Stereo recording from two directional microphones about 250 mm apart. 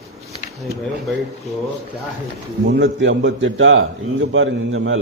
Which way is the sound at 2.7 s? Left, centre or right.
Right.